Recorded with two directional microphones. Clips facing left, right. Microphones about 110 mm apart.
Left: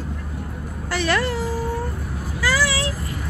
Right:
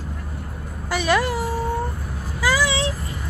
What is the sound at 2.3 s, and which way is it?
Vehicle, 15° right (ahead or behind).